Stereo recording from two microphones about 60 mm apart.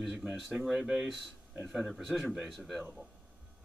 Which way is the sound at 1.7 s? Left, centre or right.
Centre.